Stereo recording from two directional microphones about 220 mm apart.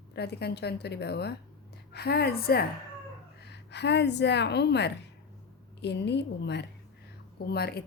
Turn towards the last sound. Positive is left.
turn(degrees=45)  # may be behind; listen again after turning